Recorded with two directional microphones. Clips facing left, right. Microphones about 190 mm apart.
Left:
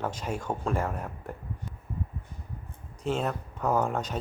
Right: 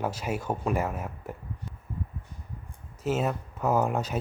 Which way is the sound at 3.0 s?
5° right (ahead or behind).